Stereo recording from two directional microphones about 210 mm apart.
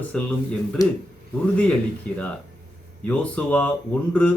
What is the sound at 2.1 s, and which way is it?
Speech, 5° left (ahead or behind).